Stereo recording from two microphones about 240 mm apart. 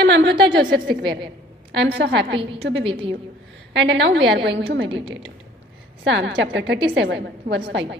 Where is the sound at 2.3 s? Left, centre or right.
Right.